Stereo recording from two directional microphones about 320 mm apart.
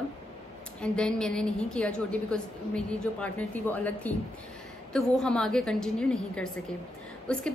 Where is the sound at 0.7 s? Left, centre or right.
Centre.